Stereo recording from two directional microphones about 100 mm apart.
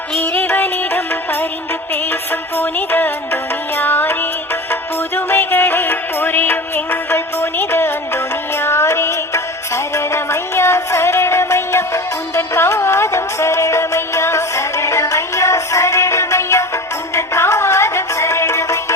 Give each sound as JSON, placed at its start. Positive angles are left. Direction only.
{"t": 0.2, "sound": "music", "side_deg": 20}
{"t": 2.6, "sound": "music", "side_deg": 20}